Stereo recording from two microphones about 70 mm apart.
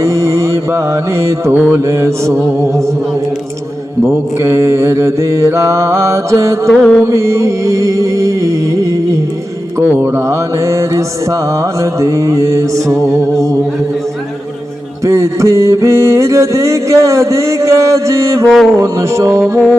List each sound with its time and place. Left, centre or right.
0.0 s mantra: right
4.4 s mantra: right
6.7 s music: centre
7.0 s mantra: right
10.2 s mantra: right
15.0 s mantra: right
18.5 s a sound: centre
18.8 s mantra: right